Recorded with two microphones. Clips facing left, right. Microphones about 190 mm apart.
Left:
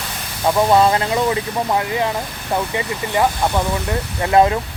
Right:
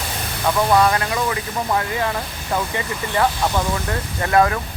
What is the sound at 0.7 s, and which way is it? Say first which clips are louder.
Speech: left 2 dB; 25° left (ahead or behind).